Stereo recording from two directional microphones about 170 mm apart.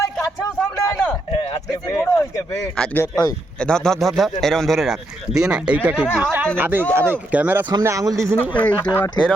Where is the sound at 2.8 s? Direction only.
5° left (ahead or behind); by 8.4 s 15° right (ahead or behind).